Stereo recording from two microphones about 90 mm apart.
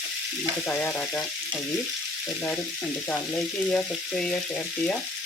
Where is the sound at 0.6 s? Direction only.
15° left (ahead or behind).